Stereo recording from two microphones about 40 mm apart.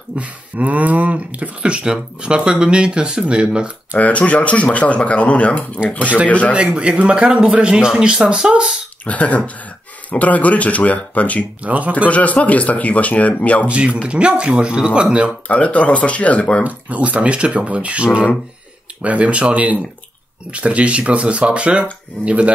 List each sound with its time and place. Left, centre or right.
0.2 s speech: right
4.0 s speech: left
6.5 s speech: right
9.0 s speech: left
11.6 s speech: right
12.1 s speech: left
13.7 s speech: right
15.4 s speech: left
16.6 s speech: right